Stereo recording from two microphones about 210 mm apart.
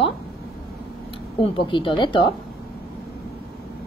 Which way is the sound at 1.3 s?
25° left (ahead or behind).